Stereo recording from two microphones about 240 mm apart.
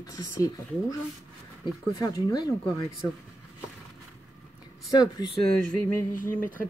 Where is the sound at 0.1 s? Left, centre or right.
Centre.